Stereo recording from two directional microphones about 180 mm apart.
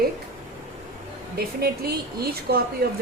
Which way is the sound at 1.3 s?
60° right (ahead or behind).